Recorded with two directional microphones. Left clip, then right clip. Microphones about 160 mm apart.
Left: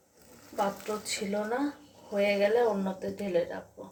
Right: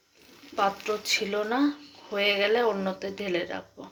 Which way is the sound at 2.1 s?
35° right (ahead or behind).